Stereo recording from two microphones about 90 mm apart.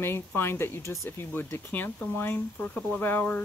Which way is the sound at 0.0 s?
25° left (ahead or behind).